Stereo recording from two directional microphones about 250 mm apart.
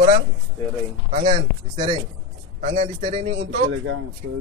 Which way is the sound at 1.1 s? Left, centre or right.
Right.